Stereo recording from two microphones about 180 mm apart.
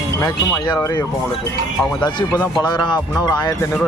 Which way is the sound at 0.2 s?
20° left (ahead or behind).